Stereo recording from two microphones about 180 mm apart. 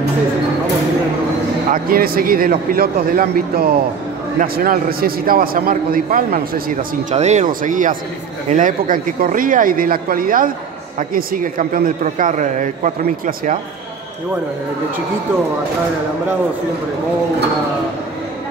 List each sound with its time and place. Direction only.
1.7 s a man's voice: 55° right (ahead or behind)
7.1 s a man's voice: 40° right (ahead or behind)